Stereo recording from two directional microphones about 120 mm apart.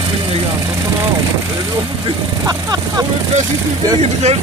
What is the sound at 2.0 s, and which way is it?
Speech, 35° right (ahead or behind).